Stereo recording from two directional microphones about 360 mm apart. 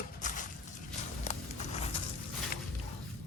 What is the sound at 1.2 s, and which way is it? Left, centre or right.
Horse, centre.